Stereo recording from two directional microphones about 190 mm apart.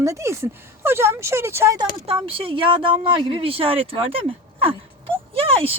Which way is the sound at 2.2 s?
30° right (ahead or behind).